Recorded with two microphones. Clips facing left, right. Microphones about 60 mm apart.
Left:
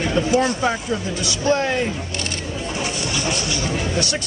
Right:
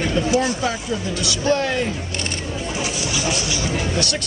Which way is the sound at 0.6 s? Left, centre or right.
Centre.